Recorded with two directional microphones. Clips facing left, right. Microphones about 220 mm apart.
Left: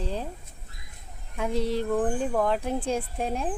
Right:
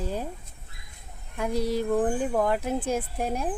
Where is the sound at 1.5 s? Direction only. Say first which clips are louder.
Even; 40° right (ahead or behind).